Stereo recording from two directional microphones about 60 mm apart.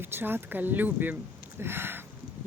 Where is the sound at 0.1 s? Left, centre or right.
Right.